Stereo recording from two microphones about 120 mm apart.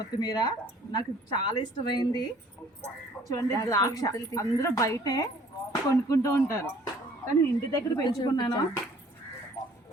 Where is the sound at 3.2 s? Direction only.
30° left (ahead or behind).